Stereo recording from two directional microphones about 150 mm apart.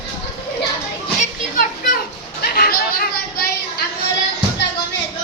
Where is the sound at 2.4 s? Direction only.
85° left.